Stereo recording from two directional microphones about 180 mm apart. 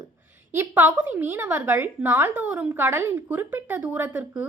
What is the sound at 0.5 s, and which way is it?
A woman's voice, 10° right (ahead or behind).